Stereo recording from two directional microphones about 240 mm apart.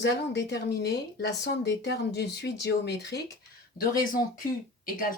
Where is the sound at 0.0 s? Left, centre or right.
Left.